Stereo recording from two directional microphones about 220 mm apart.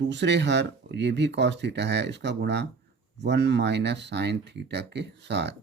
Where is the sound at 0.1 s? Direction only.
55° right (ahead or behind).